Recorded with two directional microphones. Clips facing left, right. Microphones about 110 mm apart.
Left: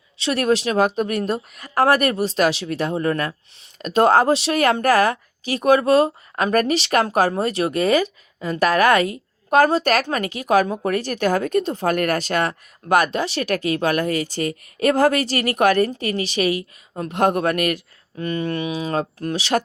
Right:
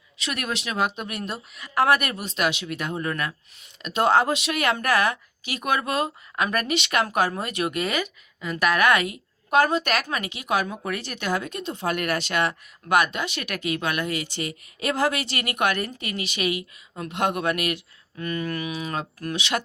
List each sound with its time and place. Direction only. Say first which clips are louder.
0.2 s a woman's voice: left 11 dB; 35° left (ahead or behind)
18.2 s a woman's voice: left 5 dB; 30° left (ahead or behind)